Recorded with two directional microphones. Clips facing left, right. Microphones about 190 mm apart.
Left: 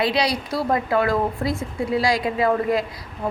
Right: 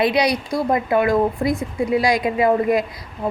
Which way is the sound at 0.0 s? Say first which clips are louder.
Right 3 dB; 20° right (ahead or behind).